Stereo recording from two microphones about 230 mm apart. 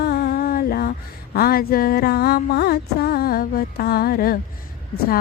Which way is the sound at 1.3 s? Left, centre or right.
Left.